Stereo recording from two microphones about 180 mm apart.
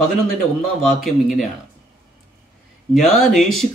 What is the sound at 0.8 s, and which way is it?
Speech, centre (ahead or behind).